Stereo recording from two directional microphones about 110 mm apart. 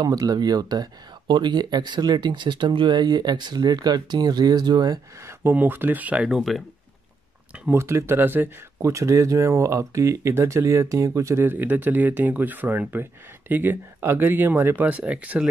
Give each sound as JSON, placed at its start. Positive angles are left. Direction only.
{"t": 0.0, "sound": "speech", "side_deg": -35}
{"t": 5.2, "sound": "speech", "side_deg": -20}
{"t": 7.7, "sound": "speech", "side_deg": -25}